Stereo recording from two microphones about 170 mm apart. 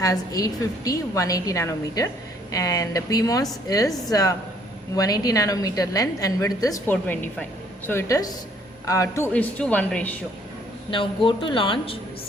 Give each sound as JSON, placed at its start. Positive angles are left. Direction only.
{"t": 0.0, "sound": "a woman's voice", "side_deg": 20}
{"t": 6.9, "sound": "a woman's voice", "side_deg": 10}
{"t": 10.9, "sound": "speech", "side_deg": 30}